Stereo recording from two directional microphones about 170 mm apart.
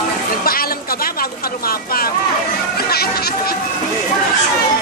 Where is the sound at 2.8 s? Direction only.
65° left (ahead or behind).